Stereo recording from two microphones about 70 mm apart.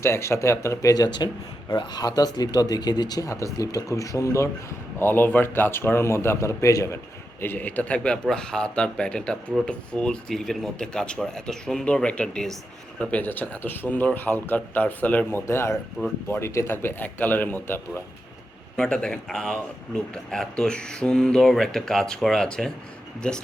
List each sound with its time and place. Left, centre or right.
0.0 s speech: left
3.2 s speech: left
4.9 s a man's voice: left
7.4 s a man's voice: left; by 12.5 s centre
13.1 s a man's voice: left
15.3 s a man's voice: left
18.8 s speech: centre